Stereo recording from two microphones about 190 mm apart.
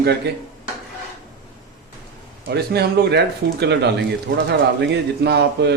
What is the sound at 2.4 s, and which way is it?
A man's voice, 60° right (ahead or behind).